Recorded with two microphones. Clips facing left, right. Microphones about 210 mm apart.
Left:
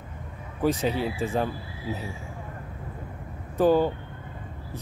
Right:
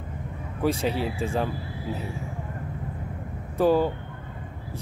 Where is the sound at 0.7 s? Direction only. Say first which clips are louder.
Even; centre (ahead or behind).